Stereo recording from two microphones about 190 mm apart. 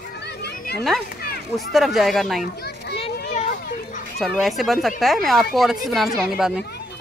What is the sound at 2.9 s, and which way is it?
Children playing, 30° left (ahead or behind).